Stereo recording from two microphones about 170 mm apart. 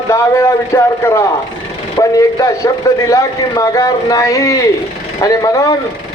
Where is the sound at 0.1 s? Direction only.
15° left (ahead or behind).